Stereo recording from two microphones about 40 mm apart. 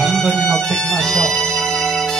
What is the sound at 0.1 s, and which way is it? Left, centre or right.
Music, centre.